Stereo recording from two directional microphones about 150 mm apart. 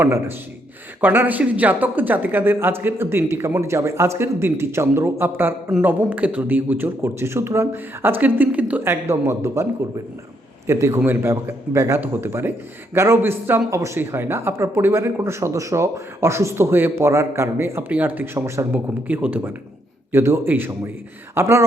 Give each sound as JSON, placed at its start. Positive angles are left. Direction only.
{"t": 0.0, "sound": "speech", "side_deg": -15}
{"t": 10.7, "sound": "speech", "side_deg": -20}